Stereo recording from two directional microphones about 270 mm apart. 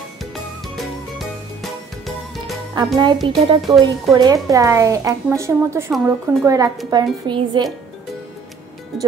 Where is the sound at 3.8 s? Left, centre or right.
Centre.